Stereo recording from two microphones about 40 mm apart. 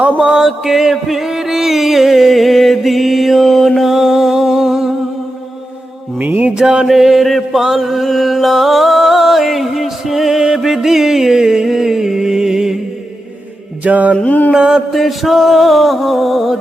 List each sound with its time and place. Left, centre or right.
0.2 s music: centre
6.1 s music: right
6.6 s mantra: right
6.8 s music: centre
13.8 s mantra: right
14.5 s mantra: centre
14.9 s music: centre